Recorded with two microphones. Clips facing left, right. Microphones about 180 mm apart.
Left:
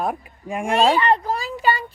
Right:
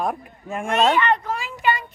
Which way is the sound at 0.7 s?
35° left (ahead or behind).